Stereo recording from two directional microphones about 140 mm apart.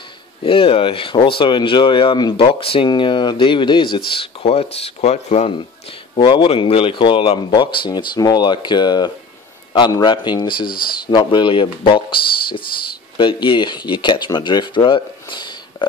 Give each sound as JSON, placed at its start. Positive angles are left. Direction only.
{"t": 0.4, "sound": "speech", "side_deg": 40}
{"t": 6.1, "sound": "speech", "side_deg": 35}